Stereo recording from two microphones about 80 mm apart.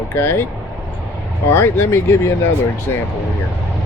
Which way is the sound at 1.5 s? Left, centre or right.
Left.